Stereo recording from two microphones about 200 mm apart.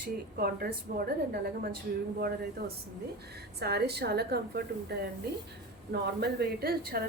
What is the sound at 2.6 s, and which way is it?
A woman's voice, 50° right (ahead or behind).